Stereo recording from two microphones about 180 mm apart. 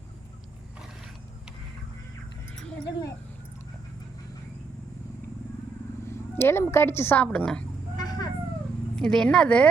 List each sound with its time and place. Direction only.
2.8 s a sound: 20° left (ahead or behind)
6.1 s speech: 15° left (ahead or behind)
7.9 s vehicle: 20° left (ahead or behind)
9.0 s speech: 5° left (ahead or behind)